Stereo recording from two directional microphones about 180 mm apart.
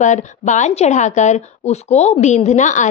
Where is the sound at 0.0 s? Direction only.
40° left (ahead or behind).